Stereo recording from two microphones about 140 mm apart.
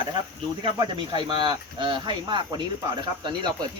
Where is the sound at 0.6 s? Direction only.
35° right (ahead or behind).